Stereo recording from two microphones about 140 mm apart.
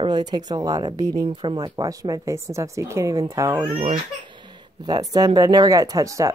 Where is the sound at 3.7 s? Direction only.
45° right (ahead or behind).